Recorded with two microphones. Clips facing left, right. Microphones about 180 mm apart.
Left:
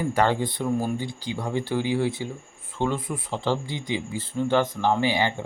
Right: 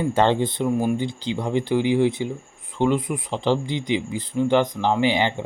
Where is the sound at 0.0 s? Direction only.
25° right (ahead or behind).